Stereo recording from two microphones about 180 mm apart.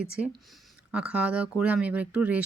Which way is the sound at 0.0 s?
5° right (ahead or behind).